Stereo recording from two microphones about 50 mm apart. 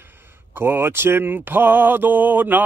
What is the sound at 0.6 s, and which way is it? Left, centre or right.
Speech, right.